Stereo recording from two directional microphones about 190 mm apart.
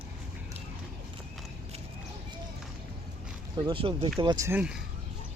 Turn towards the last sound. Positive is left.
turn(degrees=-5)  # may be behind; listen again after turning